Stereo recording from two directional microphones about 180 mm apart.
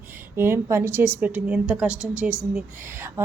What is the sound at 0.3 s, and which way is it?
A woman's voice, 15° right (ahead or behind).